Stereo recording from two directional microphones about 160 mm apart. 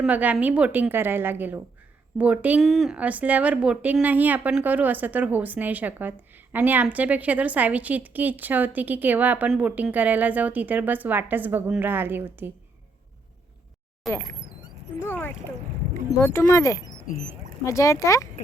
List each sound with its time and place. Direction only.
0.0 s speech: 10° right (ahead or behind)
14.0 s speech: centre (ahead or behind)
15.0 s speech: 15° left (ahead or behind)
17.1 s speech: 55° left (ahead or behind)
17.7 s speech: 20° left (ahead or behind)